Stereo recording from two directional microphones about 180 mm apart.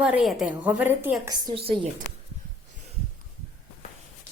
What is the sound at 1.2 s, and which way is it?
Speech, 20° right (ahead or behind).